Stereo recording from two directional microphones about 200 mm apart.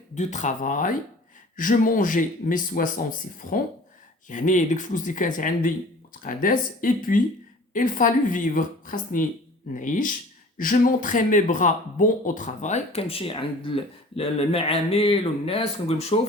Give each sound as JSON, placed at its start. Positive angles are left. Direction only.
{"t": 0.2, "sound": "speech", "side_deg": 35}